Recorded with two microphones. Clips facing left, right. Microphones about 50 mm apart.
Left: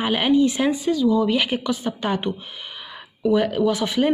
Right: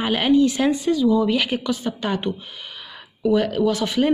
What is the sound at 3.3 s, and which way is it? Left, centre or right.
Speech, centre.